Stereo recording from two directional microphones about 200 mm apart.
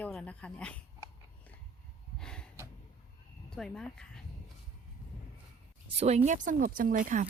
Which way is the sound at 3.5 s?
5° left (ahead or behind).